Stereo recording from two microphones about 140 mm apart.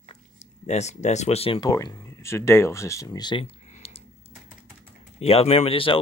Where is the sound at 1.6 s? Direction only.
25° left (ahead or behind).